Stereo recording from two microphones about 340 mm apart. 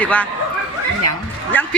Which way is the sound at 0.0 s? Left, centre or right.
Centre.